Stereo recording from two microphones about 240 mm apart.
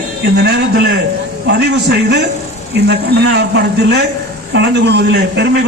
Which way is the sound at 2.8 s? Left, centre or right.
Right.